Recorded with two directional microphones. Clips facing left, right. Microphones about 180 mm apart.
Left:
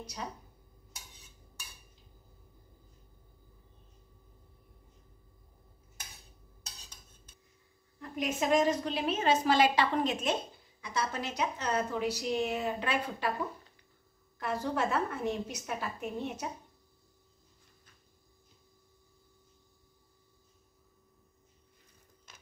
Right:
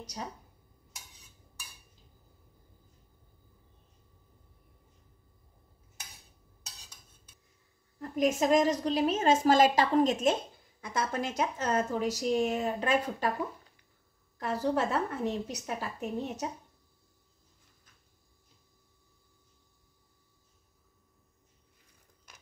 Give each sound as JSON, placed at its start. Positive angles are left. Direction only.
{"t": 8.0, "sound": "a woman's voice", "side_deg": -40}
{"t": 14.4, "sound": "a woman's voice", "side_deg": -35}